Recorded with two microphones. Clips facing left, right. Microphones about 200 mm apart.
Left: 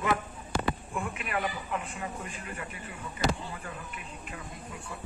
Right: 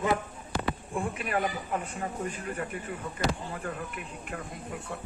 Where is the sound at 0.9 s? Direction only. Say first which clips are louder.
Right 3 dB; 35° right (ahead or behind); by 3.8 s 50° right (ahead or behind).